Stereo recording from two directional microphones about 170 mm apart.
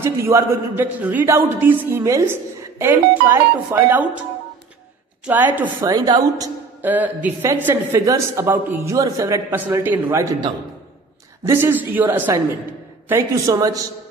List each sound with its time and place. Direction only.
0.0 s speech: 15° right (ahead or behind)
5.2 s speech: 10° right (ahead or behind)
6.9 s speech: 10° right (ahead or behind)
11.4 s a woman's voice: 15° right (ahead or behind)